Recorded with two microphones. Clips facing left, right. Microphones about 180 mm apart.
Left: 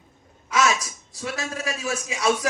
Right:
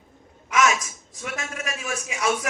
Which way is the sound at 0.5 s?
35° left (ahead or behind).